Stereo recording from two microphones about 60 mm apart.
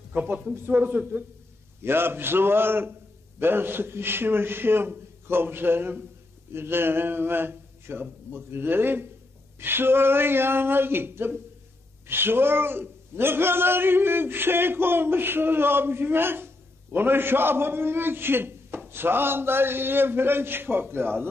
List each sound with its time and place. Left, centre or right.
0.1 s a man's voice: right